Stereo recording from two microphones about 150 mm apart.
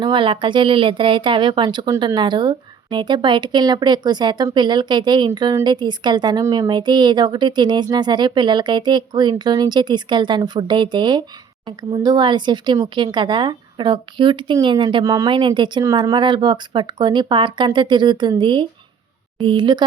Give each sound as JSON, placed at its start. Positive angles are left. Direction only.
{"t": 0.0, "sound": "speech", "side_deg": -35}